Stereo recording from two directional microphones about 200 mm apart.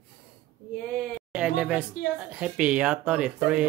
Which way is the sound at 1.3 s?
5° right (ahead or behind).